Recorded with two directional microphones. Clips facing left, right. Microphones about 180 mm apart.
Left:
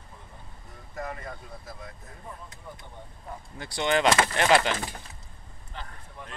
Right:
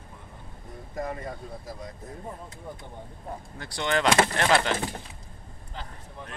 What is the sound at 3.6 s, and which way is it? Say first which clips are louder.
Speech: left 2 dB; 15° left (ahead or behind).